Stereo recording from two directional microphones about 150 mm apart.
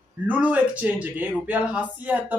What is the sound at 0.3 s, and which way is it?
A man's voice, 10° right (ahead or behind).